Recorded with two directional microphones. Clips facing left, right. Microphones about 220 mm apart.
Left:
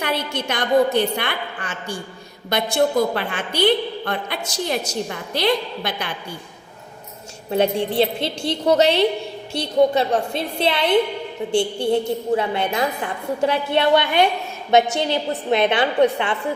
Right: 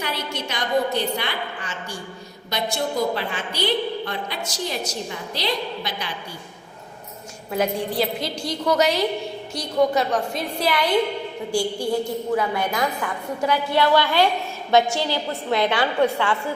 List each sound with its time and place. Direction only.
0.0 s a woman's voice: 55° left (ahead or behind)
7.5 s a woman's voice: 30° left (ahead or behind)